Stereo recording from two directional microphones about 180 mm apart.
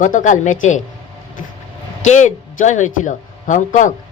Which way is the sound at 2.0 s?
40° left (ahead or behind).